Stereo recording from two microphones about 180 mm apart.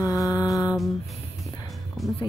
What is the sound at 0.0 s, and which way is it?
Music, 20° left (ahead or behind).